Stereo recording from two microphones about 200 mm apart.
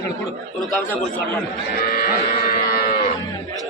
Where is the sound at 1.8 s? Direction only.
50° left (ahead or behind).